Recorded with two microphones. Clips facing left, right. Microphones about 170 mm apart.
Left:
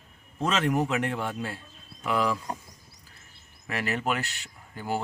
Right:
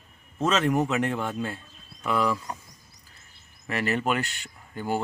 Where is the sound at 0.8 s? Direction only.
10° left (ahead or behind).